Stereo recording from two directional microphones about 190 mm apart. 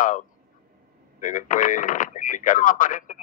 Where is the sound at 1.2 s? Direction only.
45° left (ahead or behind).